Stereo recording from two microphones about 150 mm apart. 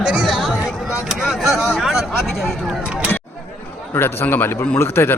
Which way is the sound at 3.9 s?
15° left (ahead or behind).